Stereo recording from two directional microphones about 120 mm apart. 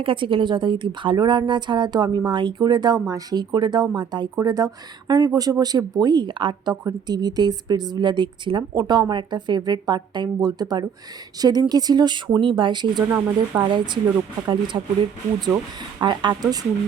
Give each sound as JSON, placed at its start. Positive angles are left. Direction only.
{"t": 0.0, "sound": "speech", "side_deg": -45}
{"t": 13.1, "sound": "speech", "side_deg": -15}
{"t": 13.6, "sound": "speech", "side_deg": -40}
{"t": 16.0, "sound": "speech", "side_deg": -40}